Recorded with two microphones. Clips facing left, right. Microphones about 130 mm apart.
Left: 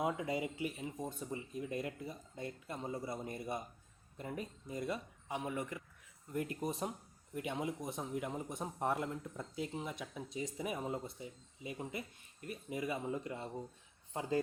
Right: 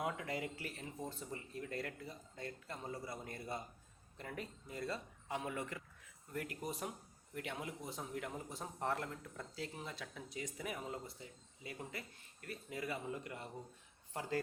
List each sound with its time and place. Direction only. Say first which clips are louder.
0.0 s speech: left 4 dB; 20° left (ahead or behind)